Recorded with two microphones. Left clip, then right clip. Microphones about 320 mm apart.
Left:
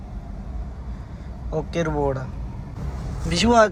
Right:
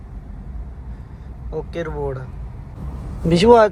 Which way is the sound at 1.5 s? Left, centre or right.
Centre.